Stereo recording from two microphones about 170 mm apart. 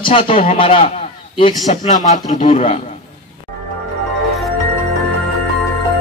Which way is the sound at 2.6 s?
35° left (ahead or behind).